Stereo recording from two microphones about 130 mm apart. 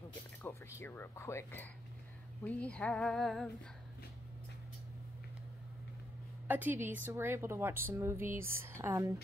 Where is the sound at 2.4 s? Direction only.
10° left (ahead or behind).